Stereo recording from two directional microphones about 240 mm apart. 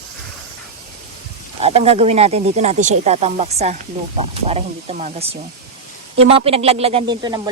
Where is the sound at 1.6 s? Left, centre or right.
Right.